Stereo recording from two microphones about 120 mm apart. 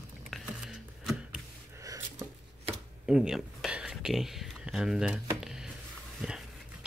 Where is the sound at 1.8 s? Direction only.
30° right (ahead or behind).